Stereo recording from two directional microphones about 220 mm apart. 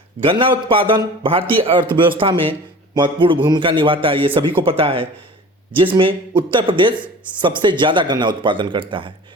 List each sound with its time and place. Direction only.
0.2 s a man's voice: 25° right (ahead or behind)